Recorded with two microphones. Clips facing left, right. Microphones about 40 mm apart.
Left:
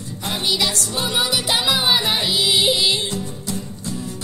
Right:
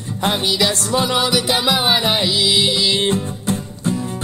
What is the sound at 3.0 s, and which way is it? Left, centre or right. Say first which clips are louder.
Music: right 7 dB; right.